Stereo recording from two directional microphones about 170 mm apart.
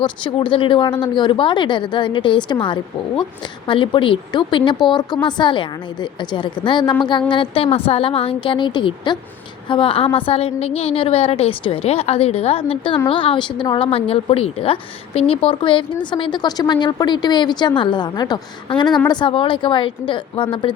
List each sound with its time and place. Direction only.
0.0 s a woman's voice: 30° left (ahead or behind)